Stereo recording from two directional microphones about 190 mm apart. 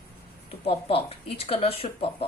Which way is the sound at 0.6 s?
30° left (ahead or behind).